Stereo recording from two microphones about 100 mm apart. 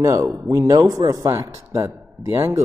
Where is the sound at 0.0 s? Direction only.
35° right (ahead or behind).